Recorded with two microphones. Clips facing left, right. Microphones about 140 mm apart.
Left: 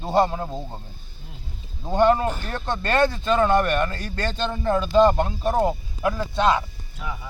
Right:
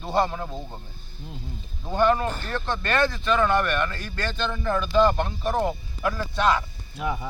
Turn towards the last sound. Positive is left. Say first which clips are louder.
# right 5 dB
turn(degrees=-25)  # may be behind; listen again after turning